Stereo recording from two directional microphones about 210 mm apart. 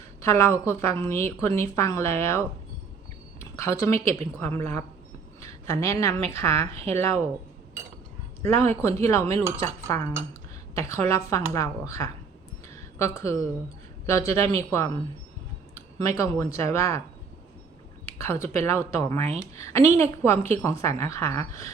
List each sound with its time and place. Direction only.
0.2 s a woman's voice: 15° left (ahead or behind)
3.5 s a woman's voice: 15° left (ahead or behind)
8.7 s a woman's voice: 15° left (ahead or behind)
12.6 s a sound: 15° left (ahead or behind)
14.1 s a woman's voice: 15° left (ahead or behind)
18.0 s a woman's voice: 10° left (ahead or behind)
19.2 s speech: 30° right (ahead or behind)
19.5 s a woman's voice: 15° left (ahead or behind)